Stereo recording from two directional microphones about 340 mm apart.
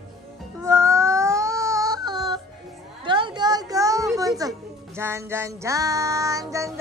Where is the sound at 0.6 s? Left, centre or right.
Centre.